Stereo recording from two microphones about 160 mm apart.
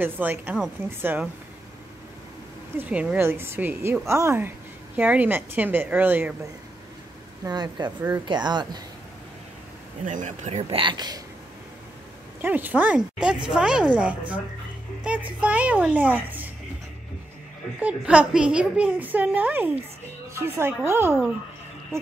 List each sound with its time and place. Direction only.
0.0 s a woman's voice: 10° right (ahead or behind)
2.8 s a woman's voice: 10° right (ahead or behind)
7.4 s speech: 25° right (ahead or behind)
10.0 s speech: 50° right (ahead or behind); by 11.1 s 30° right (ahead or behind)
12.4 s a woman's voice: 10° right (ahead or behind)
17.7 s a woman's voice: 10° right (ahead or behind)